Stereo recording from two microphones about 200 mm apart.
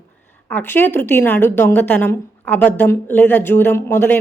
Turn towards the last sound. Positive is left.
turn(degrees=10)  # may be behind; listen again after turning